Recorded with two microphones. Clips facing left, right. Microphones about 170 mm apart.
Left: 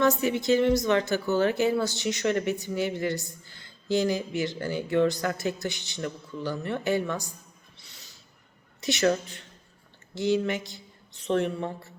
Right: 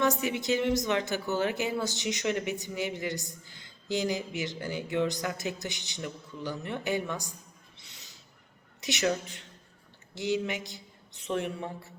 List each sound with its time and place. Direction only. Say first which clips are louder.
0.0 s speech: left 4 dB; 15° right (ahead or behind)
7.8 s a sound: left 1 dB; 20° right (ahead or behind)
8.8 s speech: left 5 dB; 15° right (ahead or behind)